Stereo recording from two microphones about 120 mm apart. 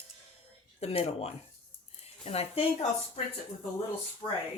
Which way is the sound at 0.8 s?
60° left (ahead or behind).